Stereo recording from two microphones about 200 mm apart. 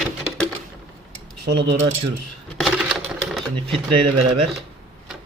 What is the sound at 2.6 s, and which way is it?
Typewriter, centre (ahead or behind).